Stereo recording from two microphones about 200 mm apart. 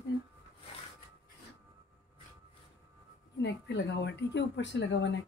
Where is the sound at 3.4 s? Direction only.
60° left (ahead or behind).